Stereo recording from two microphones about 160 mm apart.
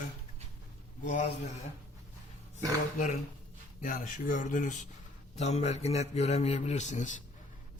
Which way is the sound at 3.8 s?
55° left (ahead or behind).